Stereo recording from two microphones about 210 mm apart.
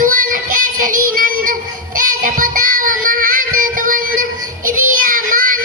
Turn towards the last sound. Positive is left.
turn(degrees=-40)  # may be behind; listen again after turning